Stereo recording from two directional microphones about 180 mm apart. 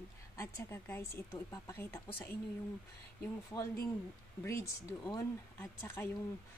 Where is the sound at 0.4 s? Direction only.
15° left (ahead or behind).